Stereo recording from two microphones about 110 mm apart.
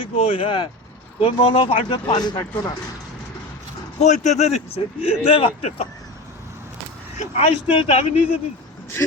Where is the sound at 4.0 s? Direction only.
90° left; by 5.7 s 60° left (ahead or behind).